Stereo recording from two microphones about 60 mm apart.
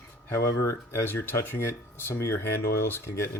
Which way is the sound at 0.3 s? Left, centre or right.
Left.